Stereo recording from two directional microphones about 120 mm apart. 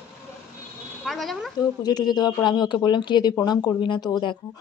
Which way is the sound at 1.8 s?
35° left (ahead or behind).